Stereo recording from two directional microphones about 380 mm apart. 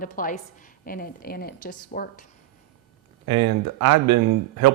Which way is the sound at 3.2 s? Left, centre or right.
Right.